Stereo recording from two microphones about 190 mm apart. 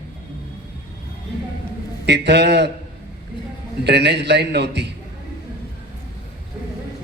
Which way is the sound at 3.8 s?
60° right (ahead or behind).